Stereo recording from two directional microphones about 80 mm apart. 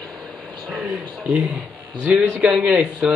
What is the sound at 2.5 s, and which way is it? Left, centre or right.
Speech, centre.